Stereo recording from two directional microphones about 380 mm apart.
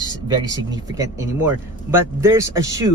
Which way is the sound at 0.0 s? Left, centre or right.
Centre.